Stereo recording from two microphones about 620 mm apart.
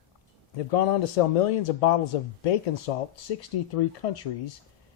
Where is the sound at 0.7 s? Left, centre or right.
Left.